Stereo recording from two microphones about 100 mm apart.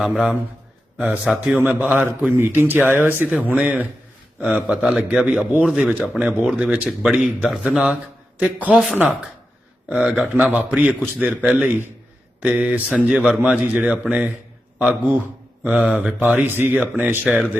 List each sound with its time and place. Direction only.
0.0 s speech: 5° right (ahead or behind)
0.9 s a man's voice: 15° right (ahead or behind)
2.3 s a man's voice: 20° right (ahead or behind)
8.7 s speech: centre (ahead or behind)
10.0 s speech: 5° right (ahead or behind)
10.8 s a man's voice: 15° right (ahead or behind)
16.2 s speech: 20° right (ahead or behind)
16.7 s a man's voice: 5° right (ahead or behind)